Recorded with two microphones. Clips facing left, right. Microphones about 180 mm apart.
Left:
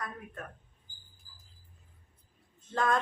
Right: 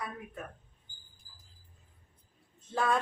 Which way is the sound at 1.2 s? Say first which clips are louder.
Left 1 dB; 40° right (ahead or behind).